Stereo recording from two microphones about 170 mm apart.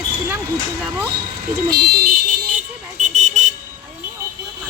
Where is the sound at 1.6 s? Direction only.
70° right (ahead or behind).